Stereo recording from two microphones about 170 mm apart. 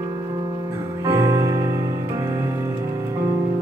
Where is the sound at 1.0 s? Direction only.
15° right (ahead or behind).